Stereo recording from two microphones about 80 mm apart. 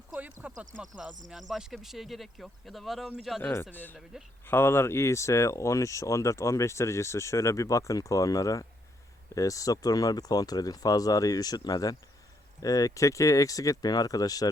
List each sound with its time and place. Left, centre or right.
0.1 s a sound: centre
0.8 s speech: centre
3.5 s speech: left